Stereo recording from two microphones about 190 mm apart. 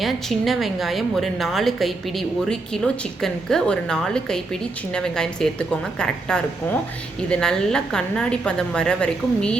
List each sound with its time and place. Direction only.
0.0 s a woman's voice: centre (ahead or behind)